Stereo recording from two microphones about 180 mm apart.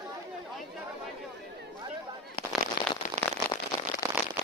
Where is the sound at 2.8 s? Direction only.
55° left (ahead or behind).